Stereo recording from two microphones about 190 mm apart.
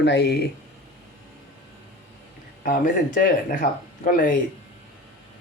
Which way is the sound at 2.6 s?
45° left (ahead or behind).